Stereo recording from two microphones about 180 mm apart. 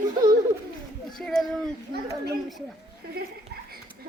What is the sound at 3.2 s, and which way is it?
Speech, 60° right (ahead or behind).